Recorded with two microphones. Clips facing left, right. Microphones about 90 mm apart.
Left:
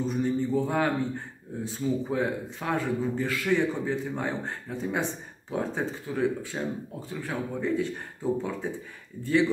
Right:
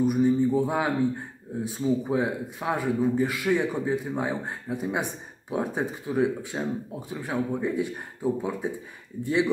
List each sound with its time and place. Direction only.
0.0 s a man's voice: 15° right (ahead or behind)